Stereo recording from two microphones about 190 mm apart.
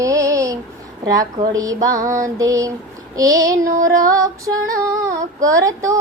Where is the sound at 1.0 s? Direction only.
20° right (ahead or behind).